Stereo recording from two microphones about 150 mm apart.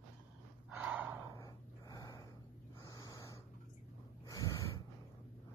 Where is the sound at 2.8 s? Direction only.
25° left (ahead or behind).